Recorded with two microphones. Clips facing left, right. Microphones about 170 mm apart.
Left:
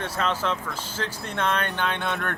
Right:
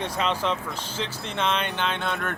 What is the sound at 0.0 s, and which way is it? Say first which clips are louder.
Speech: right 1 dB; 5° left (ahead or behind).